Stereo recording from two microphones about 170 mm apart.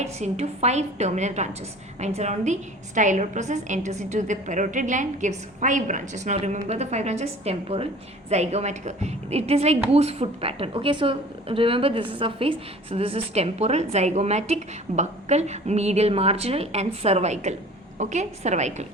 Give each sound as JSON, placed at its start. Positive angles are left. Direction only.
{"t": 0.0, "sound": "a woman's voice", "side_deg": -40}